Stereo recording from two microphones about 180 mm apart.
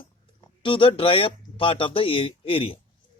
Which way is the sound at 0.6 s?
30° left (ahead or behind).